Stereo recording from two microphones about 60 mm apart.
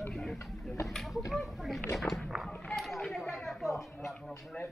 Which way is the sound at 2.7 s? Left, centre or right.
Centre.